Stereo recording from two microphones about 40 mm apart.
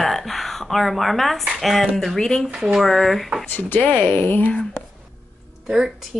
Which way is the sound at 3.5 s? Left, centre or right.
Left.